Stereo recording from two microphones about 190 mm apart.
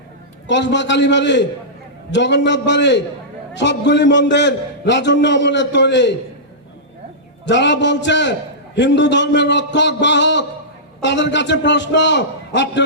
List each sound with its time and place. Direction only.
0.4 s a man's voice: 70° left (ahead or behind)
7.4 s a man's voice: 70° left (ahead or behind)